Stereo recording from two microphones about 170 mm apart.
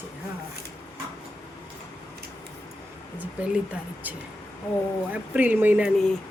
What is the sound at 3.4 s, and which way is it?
Speech, 10° right (ahead or behind).